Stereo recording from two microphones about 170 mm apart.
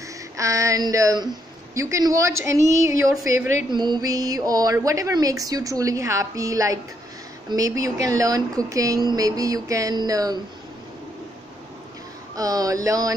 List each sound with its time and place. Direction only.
0.4 s a woman's voice: 20° right (ahead or behind)
12.4 s speech: 20° right (ahead or behind)